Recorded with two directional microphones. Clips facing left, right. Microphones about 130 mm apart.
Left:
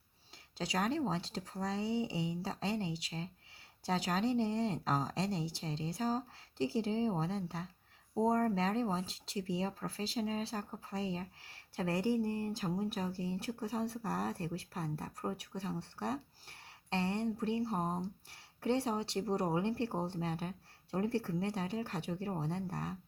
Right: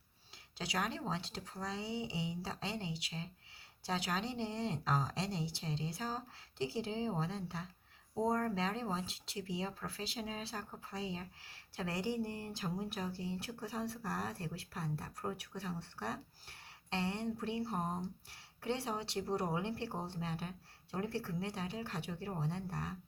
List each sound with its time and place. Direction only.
0.6 s speech: 35° left (ahead or behind)
1.6 s speech: 45° left (ahead or behind)
18.3 s speech: 45° left (ahead or behind)